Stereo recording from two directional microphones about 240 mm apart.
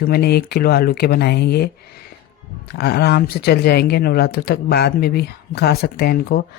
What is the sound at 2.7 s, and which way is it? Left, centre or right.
Speech, left.